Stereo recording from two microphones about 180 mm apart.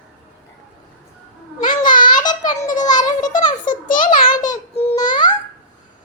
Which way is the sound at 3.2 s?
45° left (ahead or behind).